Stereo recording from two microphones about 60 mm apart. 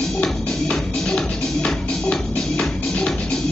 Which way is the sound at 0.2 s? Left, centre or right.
Centre.